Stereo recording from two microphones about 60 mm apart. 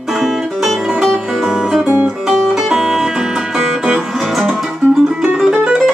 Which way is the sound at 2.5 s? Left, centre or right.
Centre.